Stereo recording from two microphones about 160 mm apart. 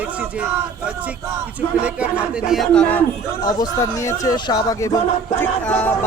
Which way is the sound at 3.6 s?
20° left (ahead or behind).